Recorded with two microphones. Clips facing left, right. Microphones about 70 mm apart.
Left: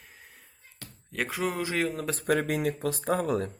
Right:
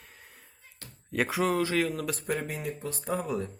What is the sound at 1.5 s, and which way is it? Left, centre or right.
Speech, centre.